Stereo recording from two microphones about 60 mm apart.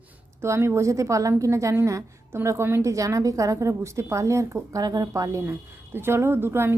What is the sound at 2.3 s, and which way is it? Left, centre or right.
Speech, right.